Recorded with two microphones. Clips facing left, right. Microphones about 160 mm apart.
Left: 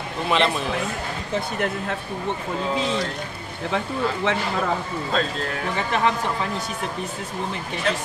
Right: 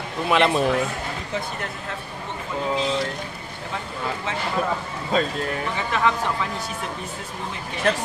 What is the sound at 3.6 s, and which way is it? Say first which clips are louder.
Speech: left 6 dB; 70° left (ahead or behind).